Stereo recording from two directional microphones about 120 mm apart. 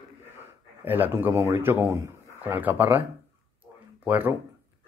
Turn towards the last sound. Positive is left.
turn(degrees=-15)  # may be behind; listen again after turning